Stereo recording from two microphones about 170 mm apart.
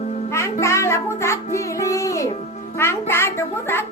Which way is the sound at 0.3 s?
15° left (ahead or behind).